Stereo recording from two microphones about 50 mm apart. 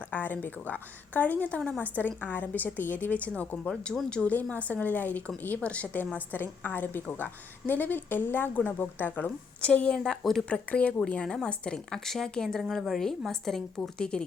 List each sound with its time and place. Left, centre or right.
0.1 s a woman's voice: left
9.6 s a woman's voice: left
9.9 s speech: centre
10.5 s a woman's voice: left
12.5 s a woman's voice: centre